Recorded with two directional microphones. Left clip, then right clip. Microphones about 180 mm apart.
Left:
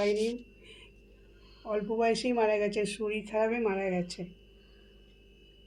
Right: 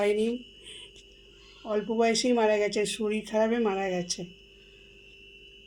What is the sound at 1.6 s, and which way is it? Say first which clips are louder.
Speech: right 3 dB; 45° right (ahead or behind).